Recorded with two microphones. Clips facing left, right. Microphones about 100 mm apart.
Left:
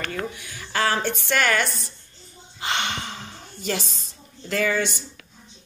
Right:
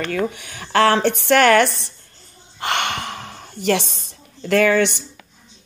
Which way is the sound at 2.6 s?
55° right (ahead or behind).